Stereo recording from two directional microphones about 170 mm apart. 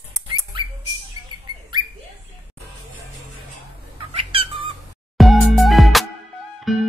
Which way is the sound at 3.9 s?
35° right (ahead or behind).